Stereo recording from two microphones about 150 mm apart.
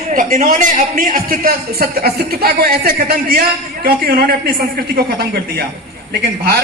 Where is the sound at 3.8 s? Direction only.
75° right (ahead or behind).